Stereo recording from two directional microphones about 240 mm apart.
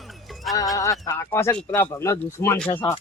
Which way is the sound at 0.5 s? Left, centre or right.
Centre.